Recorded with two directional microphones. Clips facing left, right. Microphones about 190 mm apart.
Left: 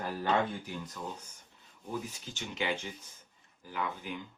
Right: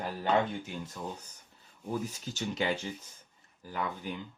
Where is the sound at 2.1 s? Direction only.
40° right (ahead or behind).